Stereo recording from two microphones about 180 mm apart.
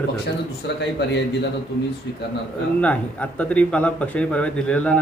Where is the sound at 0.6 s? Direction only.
65° left (ahead or behind).